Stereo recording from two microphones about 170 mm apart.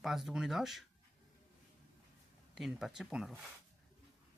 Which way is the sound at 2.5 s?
Centre (ahead or behind).